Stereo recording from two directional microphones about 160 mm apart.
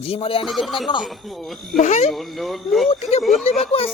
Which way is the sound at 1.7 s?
45° left (ahead or behind).